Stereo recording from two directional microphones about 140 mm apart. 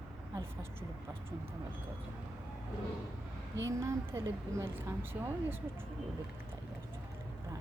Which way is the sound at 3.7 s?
20° right (ahead or behind).